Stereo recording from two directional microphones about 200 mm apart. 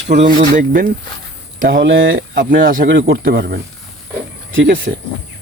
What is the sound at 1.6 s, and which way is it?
Speech, 65° right (ahead or behind).